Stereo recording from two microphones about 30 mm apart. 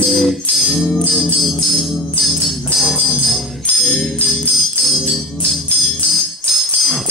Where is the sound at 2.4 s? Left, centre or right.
Centre.